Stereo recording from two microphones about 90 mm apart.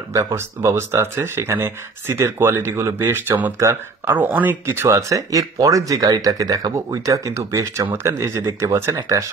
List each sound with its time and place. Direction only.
0.1 s speech: 30° right (ahead or behind)
4.2 s speech: 20° right (ahead or behind); by 9.3 s 35° right (ahead or behind)